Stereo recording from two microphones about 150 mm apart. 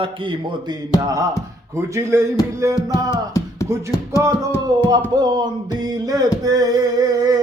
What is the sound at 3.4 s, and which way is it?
Music, 20° left (ahead or behind).